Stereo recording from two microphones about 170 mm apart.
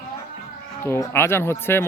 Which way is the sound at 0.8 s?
15° left (ahead or behind).